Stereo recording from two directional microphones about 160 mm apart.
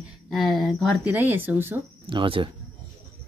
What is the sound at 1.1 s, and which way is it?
Speech, 10° right (ahead or behind).